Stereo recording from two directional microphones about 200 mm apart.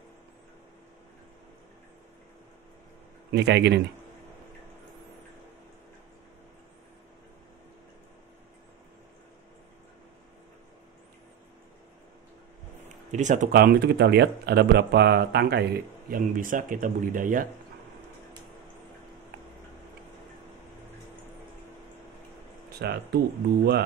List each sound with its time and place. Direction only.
3.3 s a man's voice: 60° right (ahead or behind)
13.1 s speech: 40° right (ahead or behind)
22.7 s speech: 55° right (ahead or behind)